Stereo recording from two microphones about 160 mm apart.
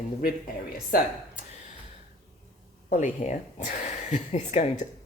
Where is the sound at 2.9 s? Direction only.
50° left (ahead or behind).